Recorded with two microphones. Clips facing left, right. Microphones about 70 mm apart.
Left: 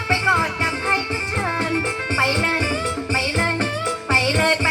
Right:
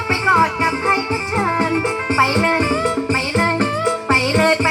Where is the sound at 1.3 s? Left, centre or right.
Right.